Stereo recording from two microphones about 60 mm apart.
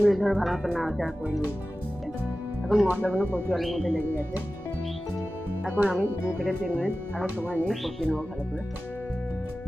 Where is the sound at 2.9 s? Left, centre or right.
Right.